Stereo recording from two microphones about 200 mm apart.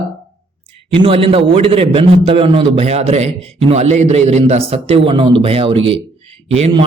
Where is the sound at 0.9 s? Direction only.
25° right (ahead or behind).